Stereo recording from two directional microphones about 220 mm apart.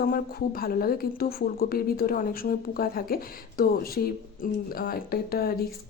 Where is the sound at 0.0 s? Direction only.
45° left (ahead or behind).